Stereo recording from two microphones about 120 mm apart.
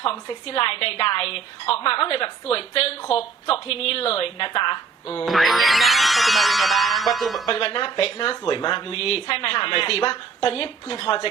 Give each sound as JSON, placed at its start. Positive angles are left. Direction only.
{"t": 0.0, "sound": "speech", "side_deg": 50}
{"t": 5.2, "sound": "speech", "side_deg": 0}
{"t": 7.4, "sound": "speech", "side_deg": 50}